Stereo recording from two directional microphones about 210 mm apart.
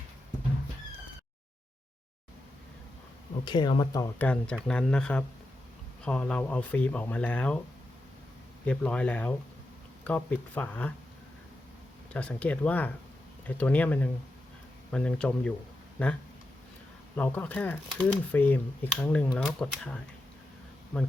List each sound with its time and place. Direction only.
3.4 s speech: 20° left (ahead or behind)
4.2 s speech: 5° left (ahead or behind)
8.6 s speech: 5° left (ahead or behind)
12.1 s speech: 5° left (ahead or behind)
17.2 s speech: 10° left (ahead or behind)